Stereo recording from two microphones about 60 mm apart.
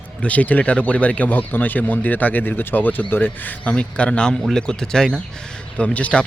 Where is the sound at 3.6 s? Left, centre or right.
Centre.